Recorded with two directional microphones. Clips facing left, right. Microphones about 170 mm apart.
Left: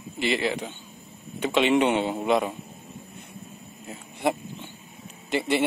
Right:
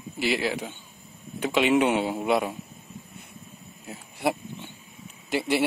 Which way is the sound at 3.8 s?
5° right (ahead or behind).